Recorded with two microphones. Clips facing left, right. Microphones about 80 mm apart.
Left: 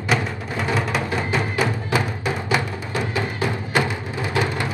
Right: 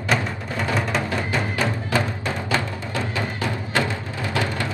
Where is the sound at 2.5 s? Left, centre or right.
Centre.